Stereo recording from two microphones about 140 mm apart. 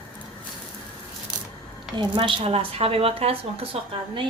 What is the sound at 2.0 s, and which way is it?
A woman's voice, 35° right (ahead or behind).